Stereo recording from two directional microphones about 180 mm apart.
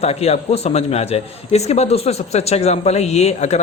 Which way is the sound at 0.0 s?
35° left (ahead or behind).